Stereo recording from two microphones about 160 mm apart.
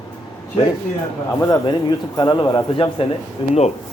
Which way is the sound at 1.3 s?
20° left (ahead or behind).